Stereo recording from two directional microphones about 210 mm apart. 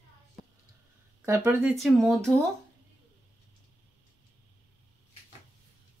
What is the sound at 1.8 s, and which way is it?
Speech, centre (ahead or behind).